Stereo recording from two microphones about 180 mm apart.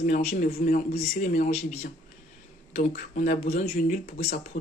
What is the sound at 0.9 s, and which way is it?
A woman's voice, 40° left (ahead or behind).